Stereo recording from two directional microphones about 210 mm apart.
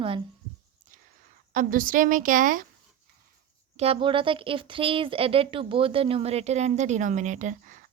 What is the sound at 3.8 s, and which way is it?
Speech, 25° right (ahead or behind).